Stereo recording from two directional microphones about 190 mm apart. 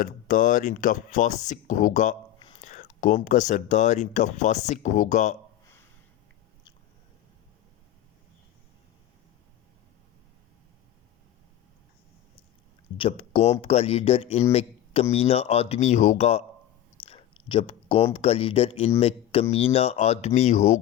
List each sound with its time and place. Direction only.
0.0 s speech: 45° left (ahead or behind)
13.0 s speech: 30° left (ahead or behind)
14.5 s a sound: 30° left (ahead or behind)
15.1 s speech: 30° left (ahead or behind)